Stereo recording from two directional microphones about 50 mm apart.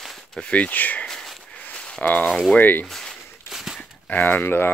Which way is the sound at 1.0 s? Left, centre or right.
Centre.